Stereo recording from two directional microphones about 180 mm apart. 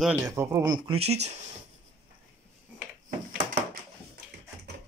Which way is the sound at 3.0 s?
50° right (ahead or behind).